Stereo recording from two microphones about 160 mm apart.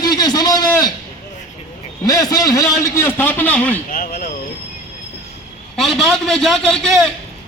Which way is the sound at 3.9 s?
65° left (ahead or behind).